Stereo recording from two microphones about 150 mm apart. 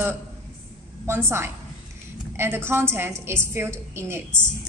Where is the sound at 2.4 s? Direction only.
15° right (ahead or behind).